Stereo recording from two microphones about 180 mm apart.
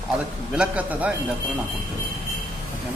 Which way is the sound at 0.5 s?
10° right (ahead or behind).